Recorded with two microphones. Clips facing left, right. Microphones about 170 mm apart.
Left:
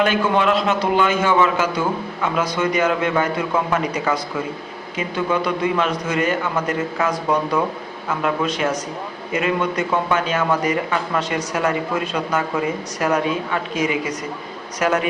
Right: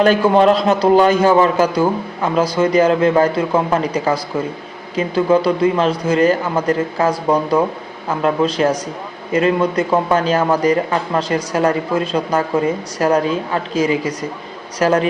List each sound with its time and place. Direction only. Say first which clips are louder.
0.0 s a man's voice: right 6 dB; 35° right (ahead or behind)
13.0 s a man's voice: right 4 dB; 35° right (ahead or behind)